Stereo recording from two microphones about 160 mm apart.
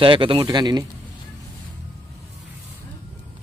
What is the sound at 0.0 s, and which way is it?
Speech, 30° right (ahead or behind).